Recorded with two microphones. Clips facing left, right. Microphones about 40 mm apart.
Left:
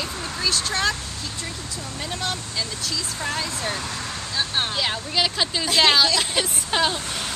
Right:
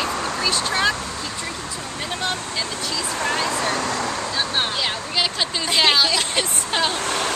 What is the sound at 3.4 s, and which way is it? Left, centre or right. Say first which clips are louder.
Speech: right 6 dB; right.